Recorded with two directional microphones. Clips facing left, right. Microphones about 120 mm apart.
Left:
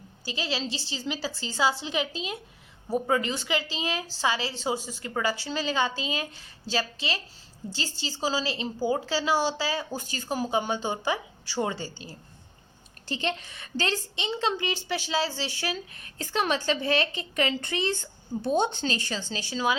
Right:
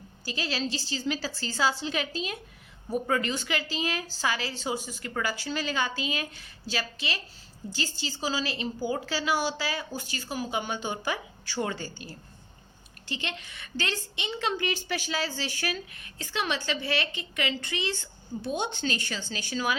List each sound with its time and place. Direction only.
0.3 s a woman's voice: 20° left (ahead or behind)
13.1 s a woman's voice: 35° left (ahead or behind)